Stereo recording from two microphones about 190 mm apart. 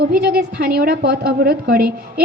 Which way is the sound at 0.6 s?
55° right (ahead or behind).